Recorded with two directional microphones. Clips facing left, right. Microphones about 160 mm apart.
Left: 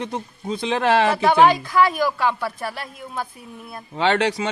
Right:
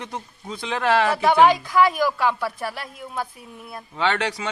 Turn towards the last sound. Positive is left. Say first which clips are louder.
# left 4 dB
turn(degrees=25)  # may be behind; listen again after turning